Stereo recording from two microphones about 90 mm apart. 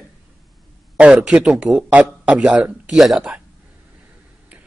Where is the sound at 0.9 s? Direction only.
10° right (ahead or behind).